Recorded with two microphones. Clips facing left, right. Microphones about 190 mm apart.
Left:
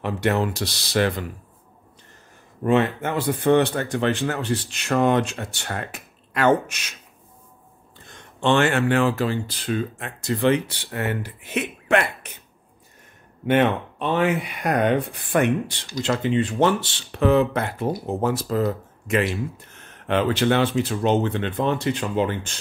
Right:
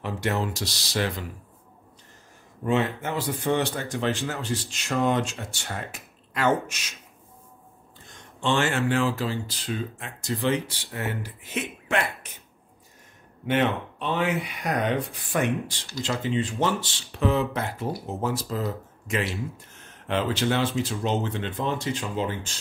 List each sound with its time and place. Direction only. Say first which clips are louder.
0.0 s speech: left 5 dB; 65° left (ahead or behind)
2.6 s speech: left 5 dB; 60° left (ahead or behind)
8.1 s speech: left 5 dB; 60° left (ahead or behind)
13.5 s speech: left 5 dB; 55° left (ahead or behind)